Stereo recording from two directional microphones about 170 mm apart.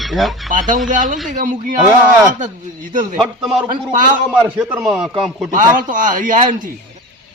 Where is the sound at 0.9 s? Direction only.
50° right (ahead or behind).